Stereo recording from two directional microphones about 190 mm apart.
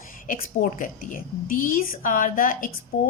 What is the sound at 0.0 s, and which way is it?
A woman's voice, 45° left (ahead or behind).